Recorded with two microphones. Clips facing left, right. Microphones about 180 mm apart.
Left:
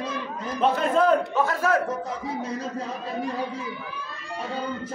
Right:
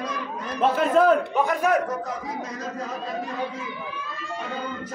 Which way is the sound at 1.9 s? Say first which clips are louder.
Even; 30° left (ahead or behind).